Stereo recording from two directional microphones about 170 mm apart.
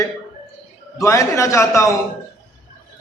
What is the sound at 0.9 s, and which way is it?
A man's voice, 20° left (ahead or behind).